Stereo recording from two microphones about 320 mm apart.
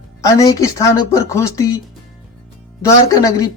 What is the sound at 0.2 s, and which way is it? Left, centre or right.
Speech, centre.